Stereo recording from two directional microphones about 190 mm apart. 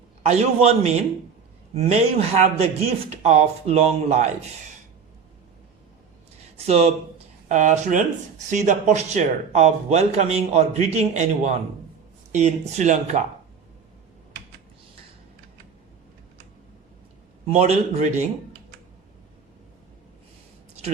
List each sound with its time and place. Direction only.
0.2 s speech: 35° right (ahead or behind)
6.6 s speech: 35° right (ahead or behind)
17.5 s speech: 35° right (ahead or behind)